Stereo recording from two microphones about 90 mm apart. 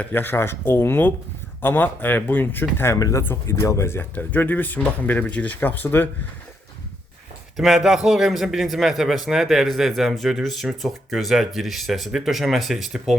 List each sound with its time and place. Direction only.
0.1 s speech: 25° left (ahead or behind)
2.9 s speech: 35° left (ahead or behind)
4.1 s speech: 20° left (ahead or behind)
7.5 s a man's voice: 5° right (ahead or behind)